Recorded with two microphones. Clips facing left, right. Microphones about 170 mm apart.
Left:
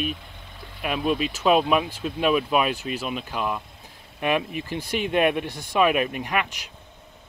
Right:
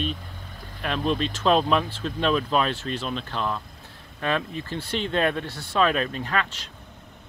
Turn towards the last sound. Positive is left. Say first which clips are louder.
# left 1 dB
turn(degrees=15)  # may be behind; listen again after turning